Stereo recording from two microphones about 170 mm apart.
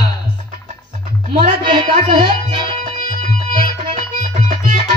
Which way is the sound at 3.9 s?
45° right (ahead or behind).